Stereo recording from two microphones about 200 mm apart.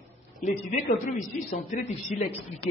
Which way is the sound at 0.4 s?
40° left (ahead or behind).